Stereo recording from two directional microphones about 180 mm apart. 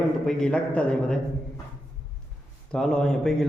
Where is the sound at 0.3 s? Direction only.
5° left (ahead or behind).